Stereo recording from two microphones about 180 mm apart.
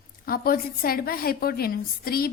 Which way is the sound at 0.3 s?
55° left (ahead or behind).